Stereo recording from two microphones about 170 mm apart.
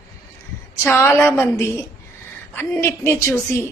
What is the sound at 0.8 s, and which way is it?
A woman's voice, 10° left (ahead or behind).